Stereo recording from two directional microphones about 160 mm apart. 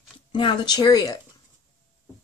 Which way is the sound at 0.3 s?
30° left (ahead or behind).